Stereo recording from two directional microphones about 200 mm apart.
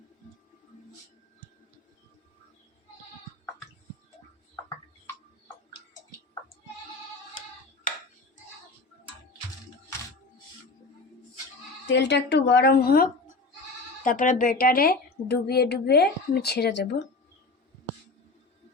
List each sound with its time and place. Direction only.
11.9 s a woman's voice: 60° left (ahead or behind)